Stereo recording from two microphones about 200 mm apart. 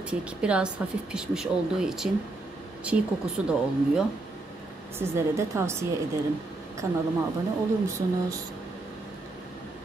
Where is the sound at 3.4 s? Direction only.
5° right (ahead or behind).